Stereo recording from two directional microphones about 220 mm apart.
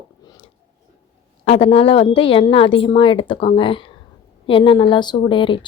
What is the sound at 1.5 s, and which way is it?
Speech, 25° left (ahead or behind).